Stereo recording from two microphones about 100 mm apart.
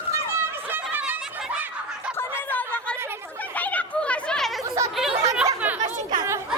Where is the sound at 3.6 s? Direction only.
15° left (ahead or behind); by 5.5 s 5° right (ahead or behind).